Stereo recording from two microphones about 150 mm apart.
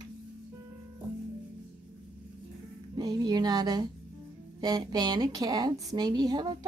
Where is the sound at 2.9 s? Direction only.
25° right (ahead or behind).